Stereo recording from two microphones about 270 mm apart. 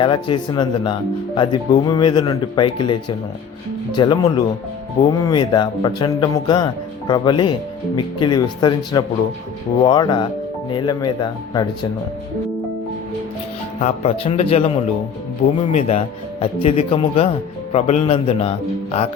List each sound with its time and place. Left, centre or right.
0.0 s speech: centre
13.8 s speech: left